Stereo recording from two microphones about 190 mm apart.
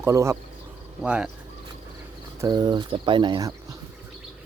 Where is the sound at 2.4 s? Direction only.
20° right (ahead or behind).